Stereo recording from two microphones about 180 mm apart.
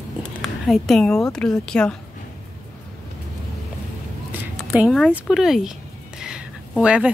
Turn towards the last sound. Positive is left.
turn(degrees=-5)  # may be behind; listen again after turning